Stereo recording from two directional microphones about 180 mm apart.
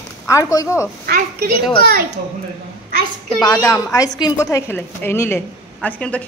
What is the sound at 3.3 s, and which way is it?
A woman's voice, 20° left (ahead or behind).